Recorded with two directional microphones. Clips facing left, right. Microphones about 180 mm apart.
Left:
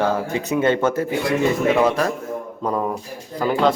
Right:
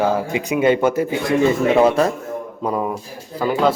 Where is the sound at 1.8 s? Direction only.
30° right (ahead or behind).